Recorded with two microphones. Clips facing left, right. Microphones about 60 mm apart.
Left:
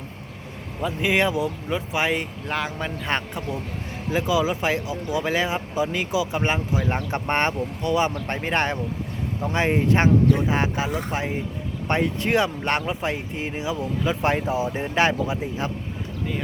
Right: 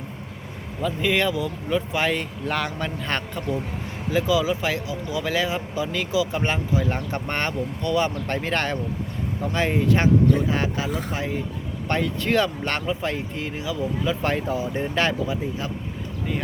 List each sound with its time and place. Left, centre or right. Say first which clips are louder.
0.8 s speech: left 1 dB; centre
1.7 s speech: right 2 dB; centre